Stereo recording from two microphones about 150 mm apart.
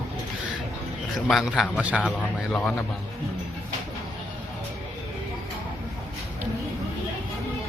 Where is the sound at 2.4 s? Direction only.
10° left (ahead or behind).